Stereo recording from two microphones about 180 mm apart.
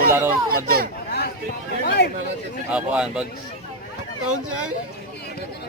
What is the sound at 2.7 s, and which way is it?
Speech, 5° right (ahead or behind).